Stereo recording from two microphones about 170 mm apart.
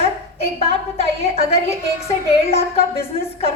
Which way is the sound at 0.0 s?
35° left (ahead or behind).